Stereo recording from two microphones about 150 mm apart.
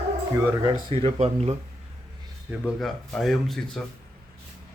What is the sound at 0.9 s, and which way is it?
Speech, 40° right (ahead or behind).